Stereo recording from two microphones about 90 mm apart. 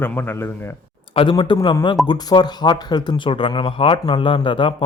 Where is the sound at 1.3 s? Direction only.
55° left (ahead or behind).